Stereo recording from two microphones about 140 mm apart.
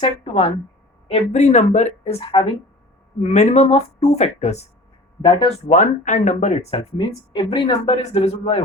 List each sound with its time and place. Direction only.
1.1 s speech: 55° left (ahead or behind)
3.2 s speech: 55° left (ahead or behind)
5.2 s speech: 40° left (ahead or behind)
5.6 s speech: 60° left (ahead or behind)